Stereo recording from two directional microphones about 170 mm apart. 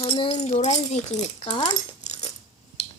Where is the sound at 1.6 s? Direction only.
40° left (ahead or behind).